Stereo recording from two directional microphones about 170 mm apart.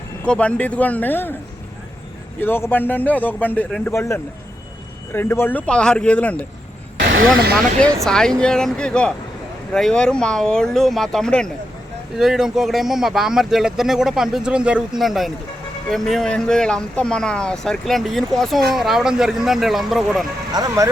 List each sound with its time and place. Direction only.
0.3 s a man's voice: 5° left (ahead or behind)
2.4 s a man's voice: 10° left (ahead or behind)
8.0 s speech: 5° left (ahead or behind)
20.5 s speech: 20° right (ahead or behind)